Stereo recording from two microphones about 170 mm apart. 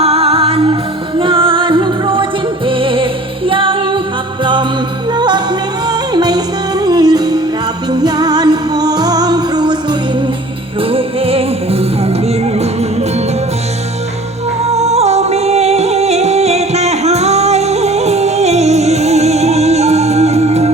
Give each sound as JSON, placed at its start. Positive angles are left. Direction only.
{"t": 0.0, "sound": "music", "side_deg": -35}
{"t": 5.1, "sound": "music", "side_deg": -25}
{"t": 10.8, "sound": "music", "side_deg": -35}
{"t": 14.7, "sound": "music", "side_deg": -40}